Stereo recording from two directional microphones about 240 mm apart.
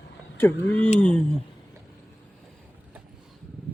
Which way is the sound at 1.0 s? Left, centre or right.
Centre.